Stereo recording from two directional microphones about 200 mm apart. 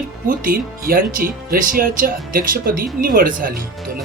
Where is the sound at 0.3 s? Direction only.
45° right (ahead or behind).